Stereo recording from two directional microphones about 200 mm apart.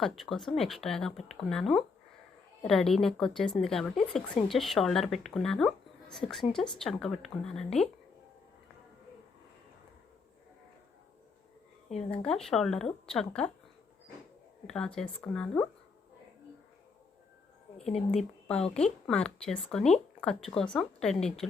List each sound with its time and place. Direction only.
0.0 s speech: centre (ahead or behind)
12.1 s speech: 5° left (ahead or behind)
14.7 s speech: 5° left (ahead or behind)
17.7 s speech: 30° left (ahead or behind)
18.1 s speech: 5° left (ahead or behind)